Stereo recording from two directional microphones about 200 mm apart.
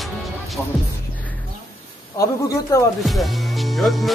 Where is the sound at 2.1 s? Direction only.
15° left (ahead or behind).